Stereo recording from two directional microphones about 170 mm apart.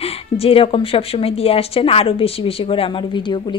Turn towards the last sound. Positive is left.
turn(degrees=25)  # may be behind; listen again after turning